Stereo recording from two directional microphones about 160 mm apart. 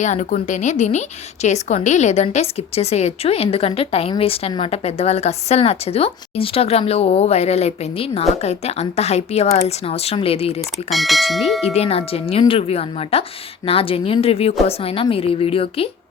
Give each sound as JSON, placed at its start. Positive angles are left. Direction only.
{"t": 0.0, "sound": "a woman's voice", "side_deg": 50}
{"t": 10.8, "sound": "speech", "side_deg": 0}
{"t": 11.6, "sound": "speech", "side_deg": 40}